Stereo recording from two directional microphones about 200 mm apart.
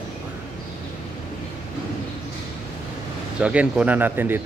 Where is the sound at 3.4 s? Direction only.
5° right (ahead or behind).